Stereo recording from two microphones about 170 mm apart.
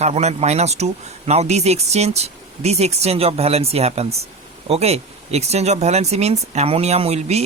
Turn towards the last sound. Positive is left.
turn(degrees=-40)  # may be behind; listen again after turning